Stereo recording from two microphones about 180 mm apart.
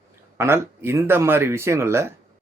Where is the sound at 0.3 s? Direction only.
15° right (ahead or behind).